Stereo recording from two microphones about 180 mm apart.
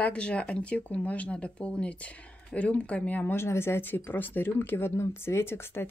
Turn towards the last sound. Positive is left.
turn(degrees=15)  # may be behind; listen again after turning